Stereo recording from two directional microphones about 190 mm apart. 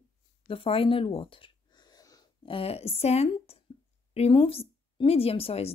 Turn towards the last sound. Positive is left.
turn(degrees=30)  # may be behind; listen again after turning